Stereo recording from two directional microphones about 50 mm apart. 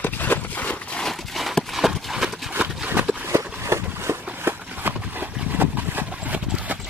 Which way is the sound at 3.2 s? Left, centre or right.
Right.